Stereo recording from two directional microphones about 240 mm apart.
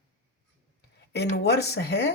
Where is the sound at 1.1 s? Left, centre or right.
Left.